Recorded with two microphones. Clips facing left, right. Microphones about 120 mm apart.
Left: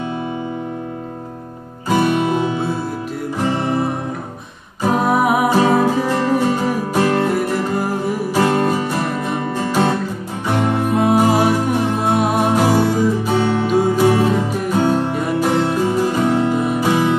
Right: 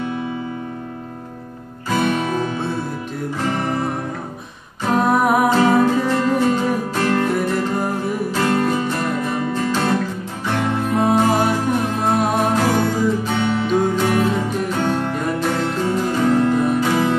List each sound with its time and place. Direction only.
3.4 s music: 15° left (ahead or behind)
13.4 s music: 25° left (ahead or behind)
13.7 s music: 5° left (ahead or behind)
14.0 s music: 20° left (ahead or behind)
14.9 s music: 10° left (ahead or behind)